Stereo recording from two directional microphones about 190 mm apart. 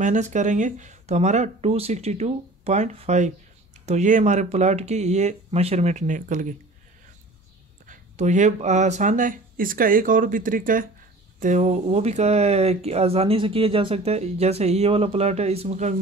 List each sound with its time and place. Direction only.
0.0 s speech: 40° right (ahead or behind)
7.8 s speech: 40° right (ahead or behind)